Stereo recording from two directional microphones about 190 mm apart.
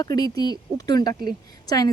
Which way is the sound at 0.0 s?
20° left (ahead or behind).